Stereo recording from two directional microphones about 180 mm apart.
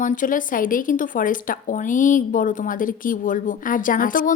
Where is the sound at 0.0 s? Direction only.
45° left (ahead or behind).